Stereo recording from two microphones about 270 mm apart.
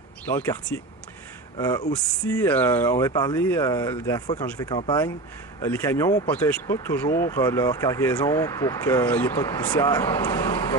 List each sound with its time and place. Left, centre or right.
0.3 s speech: centre